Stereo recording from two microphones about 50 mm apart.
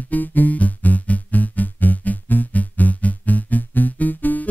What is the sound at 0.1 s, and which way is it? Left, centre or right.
Music, left.